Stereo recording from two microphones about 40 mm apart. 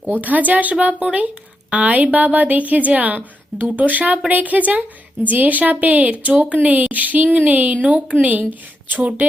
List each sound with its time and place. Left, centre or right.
0.1 s a woman's voice: right